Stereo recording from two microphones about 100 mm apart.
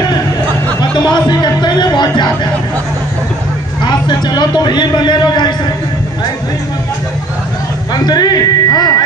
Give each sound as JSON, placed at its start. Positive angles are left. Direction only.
{"t": 0.7, "sound": "a sound", "side_deg": 45}
{"t": 3.8, "sound": "a man's voice", "side_deg": 45}
{"t": 7.9, "sound": "speech", "side_deg": 45}